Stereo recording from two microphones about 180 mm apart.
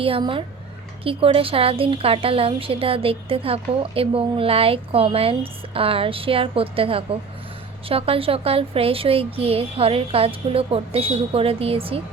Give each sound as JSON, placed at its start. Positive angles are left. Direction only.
{"t": 0.0, "sound": "a child's voice", "side_deg": -30}